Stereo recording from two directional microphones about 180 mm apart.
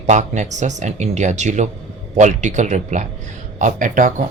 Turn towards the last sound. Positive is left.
turn(degrees=-45)  # may be behind; listen again after turning